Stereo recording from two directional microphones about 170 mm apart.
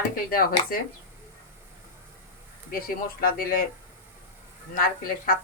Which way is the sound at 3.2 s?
60° left (ahead or behind).